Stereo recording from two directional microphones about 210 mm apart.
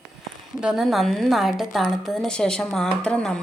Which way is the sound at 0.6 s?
Centre (ahead or behind).